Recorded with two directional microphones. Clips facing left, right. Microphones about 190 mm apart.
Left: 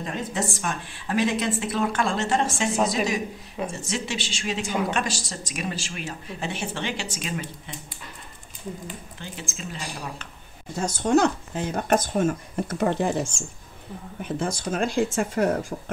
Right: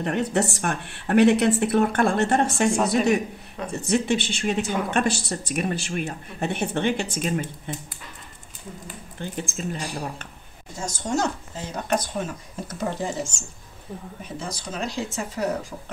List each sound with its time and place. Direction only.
0.0 s a woman's voice: 65° right (ahead or behind)
3.7 s a woman's voice: 60° right (ahead or behind)
9.2 s speech: 55° right (ahead or behind)
10.9 s speech: 60° left (ahead or behind)